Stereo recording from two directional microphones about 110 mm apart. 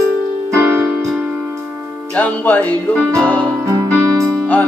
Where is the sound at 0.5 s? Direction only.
20° right (ahead or behind).